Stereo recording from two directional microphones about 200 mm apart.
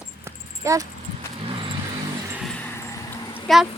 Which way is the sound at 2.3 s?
5° left (ahead or behind).